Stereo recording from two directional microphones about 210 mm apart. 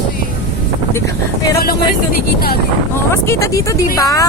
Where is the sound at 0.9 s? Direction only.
15° left (ahead or behind).